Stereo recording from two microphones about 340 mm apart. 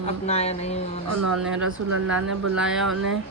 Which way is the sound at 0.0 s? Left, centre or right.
Centre.